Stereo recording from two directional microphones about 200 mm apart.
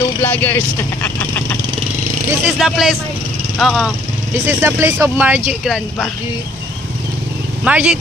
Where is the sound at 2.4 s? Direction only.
Centre (ahead or behind).